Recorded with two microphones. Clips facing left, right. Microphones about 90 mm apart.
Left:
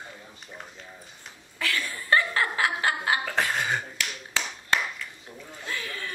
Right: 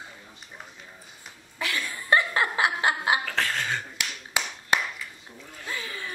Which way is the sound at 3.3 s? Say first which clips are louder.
Left 2 dB; 15° left (ahead or behind).